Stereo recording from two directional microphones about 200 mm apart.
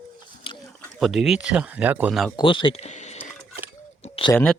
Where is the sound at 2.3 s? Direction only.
25° left (ahead or behind).